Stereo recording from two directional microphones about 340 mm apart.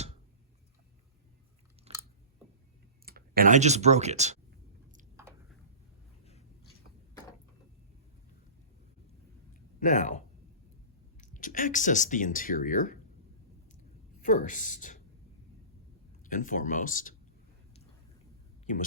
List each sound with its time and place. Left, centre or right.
1.9 s chewing: centre
3.1 s speech: right
5.1 s a sound: centre
9.8 s speech: left
14.2 s speech: left
16.2 s speech: left
18.6 s speech: left